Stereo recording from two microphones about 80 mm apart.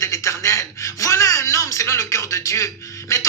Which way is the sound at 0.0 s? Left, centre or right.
Left.